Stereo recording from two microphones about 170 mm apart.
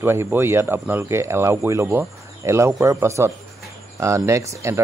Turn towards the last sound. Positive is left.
turn(degrees=-15)  # may be behind; listen again after turning